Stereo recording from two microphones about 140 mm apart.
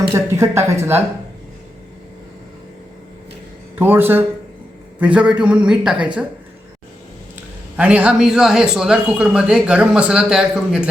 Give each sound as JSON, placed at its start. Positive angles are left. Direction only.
{"t": 0.1, "sound": "speech", "side_deg": -20}
{"t": 3.8, "sound": "speech", "side_deg": -15}
{"t": 7.3, "sound": "speech", "side_deg": -10}